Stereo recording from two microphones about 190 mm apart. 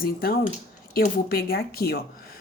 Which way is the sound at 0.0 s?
50° left (ahead or behind).